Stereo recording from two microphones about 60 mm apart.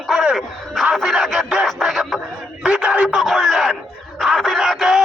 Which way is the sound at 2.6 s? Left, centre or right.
Centre.